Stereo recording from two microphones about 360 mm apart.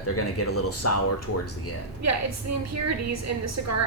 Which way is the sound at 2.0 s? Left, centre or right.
Right.